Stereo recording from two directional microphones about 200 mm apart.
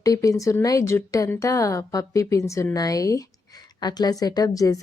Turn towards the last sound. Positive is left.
turn(degrees=15)  # may be behind; listen again after turning